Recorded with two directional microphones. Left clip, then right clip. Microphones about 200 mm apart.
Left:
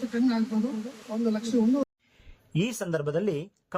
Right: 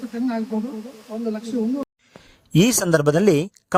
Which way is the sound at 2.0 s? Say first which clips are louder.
Right 12 dB; 35° right (ahead or behind).